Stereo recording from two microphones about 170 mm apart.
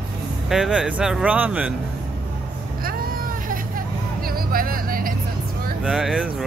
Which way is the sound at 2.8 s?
55° right (ahead or behind).